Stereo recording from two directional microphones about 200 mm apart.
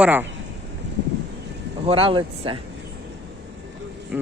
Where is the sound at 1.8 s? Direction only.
25° right (ahead or behind).